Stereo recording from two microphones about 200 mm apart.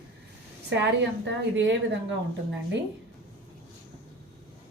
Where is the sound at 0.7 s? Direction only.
60° right (ahead or behind).